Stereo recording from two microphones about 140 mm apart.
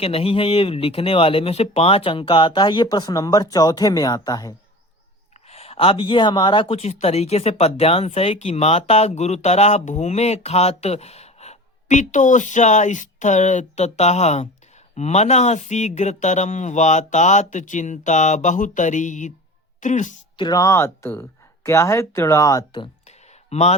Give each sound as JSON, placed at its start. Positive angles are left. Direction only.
{"t": 0.0, "sound": "speech", "side_deg": 45}
{"t": 5.5, "sound": "speech", "side_deg": 45}
{"t": 20.3, "sound": "speech", "side_deg": 30}
{"t": 23.0, "sound": "a sound", "side_deg": 50}